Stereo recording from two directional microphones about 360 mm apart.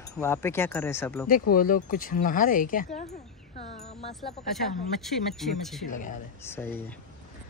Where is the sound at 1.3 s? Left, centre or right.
Left.